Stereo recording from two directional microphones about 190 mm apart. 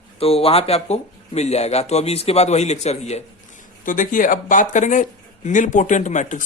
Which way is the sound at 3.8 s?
45° left (ahead or behind).